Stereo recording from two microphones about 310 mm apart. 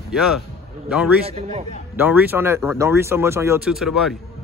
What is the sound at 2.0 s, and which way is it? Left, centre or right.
Speech, centre.